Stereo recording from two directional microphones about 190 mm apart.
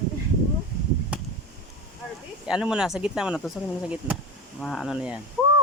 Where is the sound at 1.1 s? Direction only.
5° right (ahead or behind).